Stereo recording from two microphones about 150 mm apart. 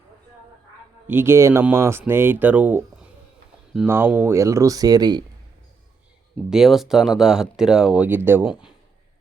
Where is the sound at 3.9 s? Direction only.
15° right (ahead or behind).